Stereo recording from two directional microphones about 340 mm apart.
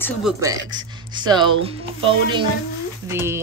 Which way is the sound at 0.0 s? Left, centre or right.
Centre.